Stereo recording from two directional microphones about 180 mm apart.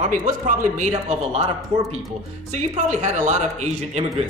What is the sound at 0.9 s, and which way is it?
Speech, 35° right (ahead or behind).